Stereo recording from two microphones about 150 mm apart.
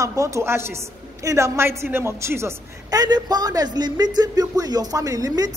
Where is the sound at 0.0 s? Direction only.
20° right (ahead or behind).